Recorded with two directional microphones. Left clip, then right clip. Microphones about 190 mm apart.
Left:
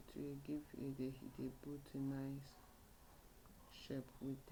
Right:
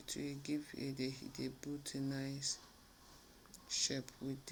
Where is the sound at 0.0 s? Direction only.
15° right (ahead or behind).